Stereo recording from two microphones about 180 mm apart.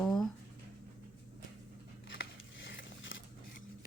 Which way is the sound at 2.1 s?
75° left (ahead or behind).